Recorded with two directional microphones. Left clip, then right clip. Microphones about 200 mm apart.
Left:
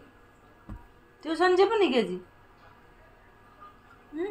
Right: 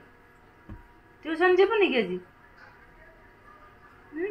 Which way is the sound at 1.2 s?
Centre (ahead or behind).